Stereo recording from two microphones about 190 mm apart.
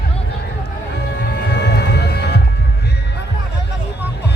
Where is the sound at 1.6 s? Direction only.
60° left (ahead or behind).